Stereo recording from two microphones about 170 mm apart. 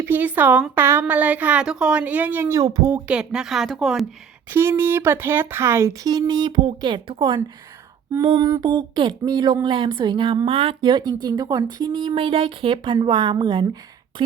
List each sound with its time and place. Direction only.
0.0 s a woman's voice: 10° right (ahead or behind)
3.1 s a woman's voice: 5° right (ahead or behind)
4.4 s a woman's voice: 15° right (ahead or behind); by 14.3 s 30° right (ahead or behind)